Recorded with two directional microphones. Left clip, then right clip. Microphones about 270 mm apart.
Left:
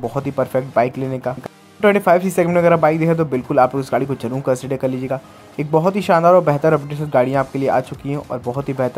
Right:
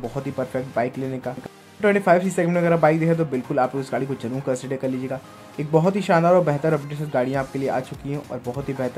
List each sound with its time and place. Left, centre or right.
0.0 s speech: centre